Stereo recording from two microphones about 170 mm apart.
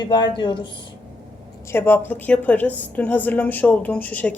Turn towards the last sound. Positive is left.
turn(degrees=10)  # may be behind; listen again after turning